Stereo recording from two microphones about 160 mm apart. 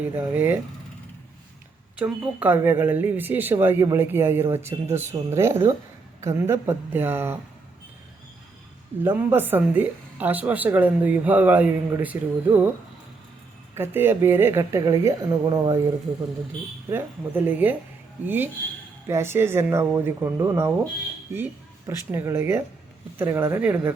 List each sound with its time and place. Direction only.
0.2 s speech: 10° right (ahead or behind)
2.0 s speech: 5° right (ahead or behind)
9.0 s speech: 10° right (ahead or behind)
13.7 s speech: 15° right (ahead or behind)
16.9 s speech: 10° right (ahead or behind)
19.0 s speech: 15° right (ahead or behind)